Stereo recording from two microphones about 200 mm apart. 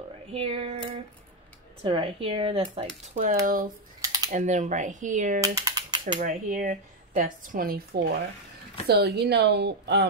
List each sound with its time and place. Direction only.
0.3 s speech: 30° right (ahead or behind)
1.8 s speech: 25° right (ahead or behind)
3.4 s speech: 45° right (ahead or behind)
4.0 s typing: 20° right (ahead or behind)
4.3 s speech: 40° right (ahead or behind)
5.4 s typing: 15° right (ahead or behind)
6.1 s speech: 40° right (ahead or behind); by 10.0 s 55° right (ahead or behind)